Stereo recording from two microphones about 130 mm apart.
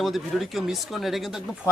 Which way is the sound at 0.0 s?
Centre (ahead or behind).